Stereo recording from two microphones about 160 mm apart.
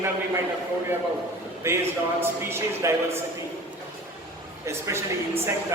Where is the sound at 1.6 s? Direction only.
15° right (ahead or behind).